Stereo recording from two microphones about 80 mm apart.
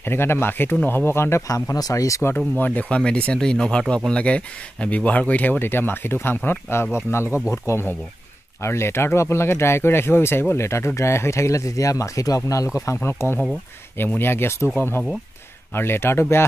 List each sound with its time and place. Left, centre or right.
0.0 s speech: left
1.5 s speech: left
2.3 s speech: left
7.2 s speech: centre
7.5 s speech: left